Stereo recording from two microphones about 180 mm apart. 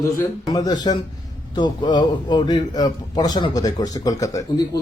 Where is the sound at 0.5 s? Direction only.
20° left (ahead or behind).